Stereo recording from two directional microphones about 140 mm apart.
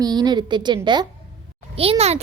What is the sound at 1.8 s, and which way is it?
Speech, 45° right (ahead or behind).